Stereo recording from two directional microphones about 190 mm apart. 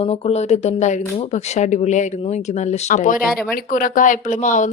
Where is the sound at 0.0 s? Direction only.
30° left (ahead or behind).